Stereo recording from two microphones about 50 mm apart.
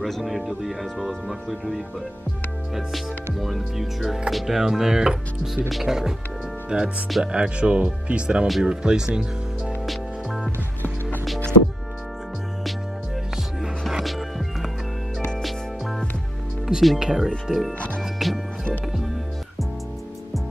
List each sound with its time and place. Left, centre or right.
0.0 s speech: centre
3.3 s speech: centre
9.8 s music: centre
13.6 s music: centre
16.6 s speech: centre